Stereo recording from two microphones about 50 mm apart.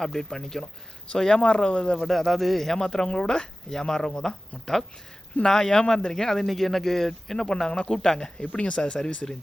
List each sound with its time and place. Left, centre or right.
0.0 s speech: centre
2.0 s speech: centre; by 9.2 s left